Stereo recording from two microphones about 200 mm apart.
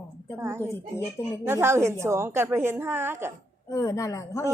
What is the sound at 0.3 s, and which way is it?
A woman's voice, 10° right (ahead or behind).